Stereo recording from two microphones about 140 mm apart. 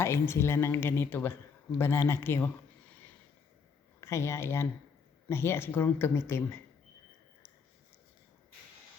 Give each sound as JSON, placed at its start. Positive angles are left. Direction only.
{"t": 0.0, "sound": "speech", "side_deg": 20}
{"t": 4.0, "sound": "speech", "side_deg": 20}